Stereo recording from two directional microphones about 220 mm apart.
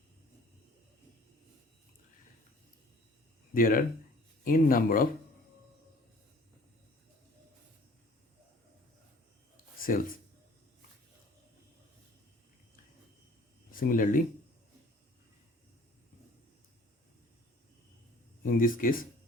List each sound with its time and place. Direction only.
3.5 s speech: 40° left (ahead or behind)
9.7 s a sound: 40° left (ahead or behind)
13.7 s speech: 40° left (ahead or behind)
18.4 s speech: 40° left (ahead or behind)